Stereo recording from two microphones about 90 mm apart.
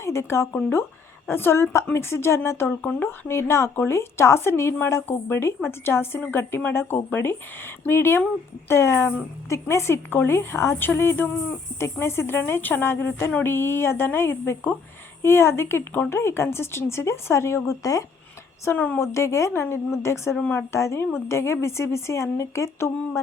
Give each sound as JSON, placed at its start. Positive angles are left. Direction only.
{"t": 0.0, "sound": "speech", "side_deg": 30}
{"t": 20.3, "sound": "speech", "side_deg": 15}
{"t": 20.6, "sound": "a woman's voice", "side_deg": 30}